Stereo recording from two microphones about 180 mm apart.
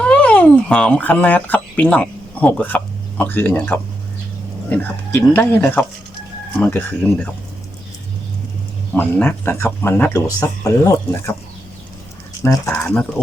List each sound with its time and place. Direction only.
0.0 s speech: 5° left (ahead or behind)
9.0 s speech: 10° left (ahead or behind)
12.4 s speech: 15° left (ahead or behind)